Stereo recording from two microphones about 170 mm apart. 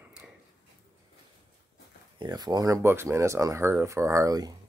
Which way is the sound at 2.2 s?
25° right (ahead or behind).